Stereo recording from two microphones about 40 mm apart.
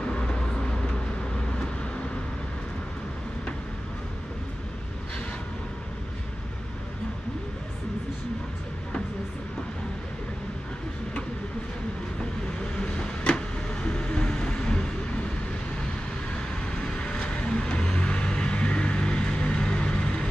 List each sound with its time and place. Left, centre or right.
0.0 s vehicle: left
12.7 s vehicle: left
16.7 s vehicle: left